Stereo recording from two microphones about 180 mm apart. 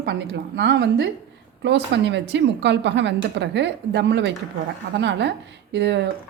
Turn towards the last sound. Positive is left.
turn(degrees=-80)